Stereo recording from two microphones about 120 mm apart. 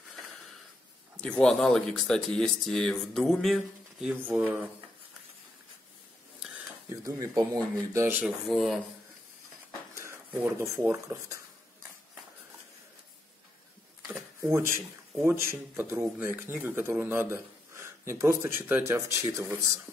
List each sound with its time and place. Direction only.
1.1 s speech: 10° left (ahead or behind)
4.1 s speech: 10° right (ahead or behind)
6.9 s speech: 30° right (ahead or behind)
8.5 s speech: centre (ahead or behind)
10.0 s speech: 20° right (ahead or behind)
14.4 s speech: 20° right (ahead or behind)